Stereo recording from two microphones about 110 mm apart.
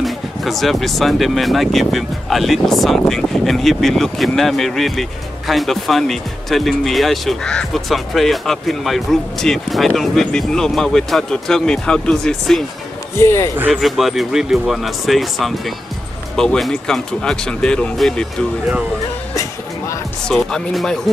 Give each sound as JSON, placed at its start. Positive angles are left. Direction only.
{"t": 0.0, "sound": "speech", "side_deg": 0}
{"t": 13.2, "sound": "speech", "side_deg": 25}
{"t": 13.7, "sound": "speech", "side_deg": 0}
{"t": 20.2, "sound": "speech", "side_deg": 5}